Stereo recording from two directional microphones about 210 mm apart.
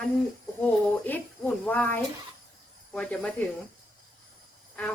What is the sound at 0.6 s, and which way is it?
Speech, 10° left (ahead or behind).